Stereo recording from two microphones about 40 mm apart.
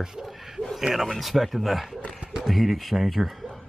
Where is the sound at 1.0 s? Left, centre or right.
Centre.